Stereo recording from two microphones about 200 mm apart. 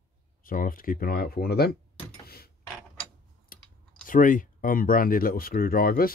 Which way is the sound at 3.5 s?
45° left (ahead or behind).